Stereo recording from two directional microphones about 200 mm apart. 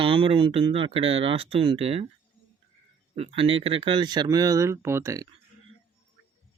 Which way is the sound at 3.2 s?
30° right (ahead or behind).